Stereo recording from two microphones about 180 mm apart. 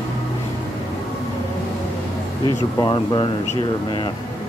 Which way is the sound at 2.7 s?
25° left (ahead or behind).